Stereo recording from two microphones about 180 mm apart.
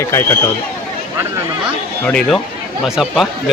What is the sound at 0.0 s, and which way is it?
Speech, 15° left (ahead or behind).